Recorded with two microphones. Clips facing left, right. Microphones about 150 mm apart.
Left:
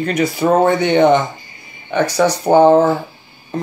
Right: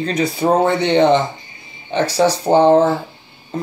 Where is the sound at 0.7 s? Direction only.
25° right (ahead or behind).